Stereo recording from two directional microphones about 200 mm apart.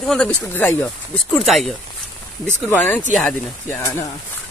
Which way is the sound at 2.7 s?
10° left (ahead or behind).